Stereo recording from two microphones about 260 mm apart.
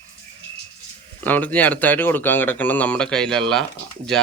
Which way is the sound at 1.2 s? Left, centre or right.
Centre.